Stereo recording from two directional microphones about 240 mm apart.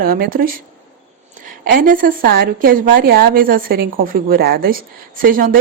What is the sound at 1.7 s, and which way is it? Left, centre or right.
A woman's voice, right.